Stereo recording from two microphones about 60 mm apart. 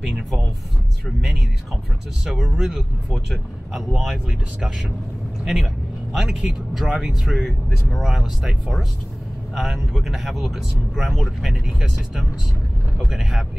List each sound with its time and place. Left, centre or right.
2.2 s speech: centre
5.4 s speech: centre
9.6 s speech: centre
13.1 s speech: centre